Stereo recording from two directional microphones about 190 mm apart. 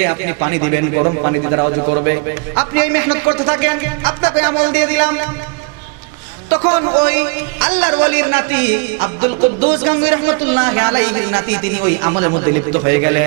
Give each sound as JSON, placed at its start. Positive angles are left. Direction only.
{"t": 0.0, "sound": "a man's voice", "side_deg": -15}
{"t": 2.0, "sound": "speech", "side_deg": -15}
{"t": 7.0, "sound": "speech", "side_deg": -10}